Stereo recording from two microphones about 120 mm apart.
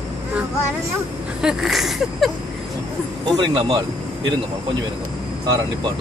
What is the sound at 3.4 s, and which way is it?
Speech, 45° right (ahead or behind).